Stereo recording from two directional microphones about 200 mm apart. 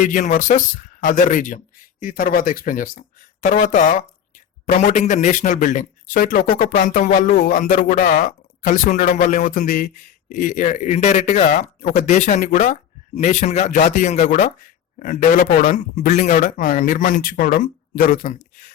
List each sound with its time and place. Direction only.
0.0 s a man's voice: 40° left (ahead or behind)